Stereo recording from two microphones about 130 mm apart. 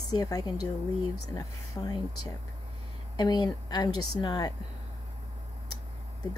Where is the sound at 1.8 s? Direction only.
20° left (ahead or behind).